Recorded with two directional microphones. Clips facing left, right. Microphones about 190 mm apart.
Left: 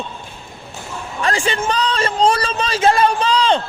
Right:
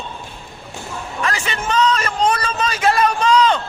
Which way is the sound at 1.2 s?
30° left (ahead or behind).